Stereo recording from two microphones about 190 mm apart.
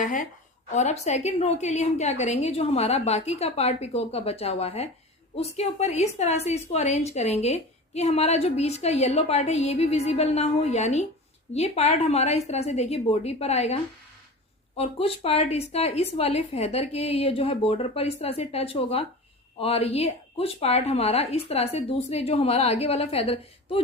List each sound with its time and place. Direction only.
0.0 s a woman's voice: 45° left (ahead or behind)
14.8 s a woman's voice: 30° left (ahead or behind)